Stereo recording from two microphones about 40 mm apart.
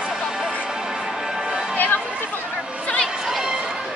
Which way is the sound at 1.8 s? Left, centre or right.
Left.